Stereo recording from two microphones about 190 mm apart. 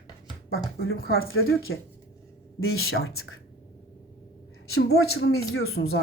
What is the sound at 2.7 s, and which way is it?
Speech, 90° left.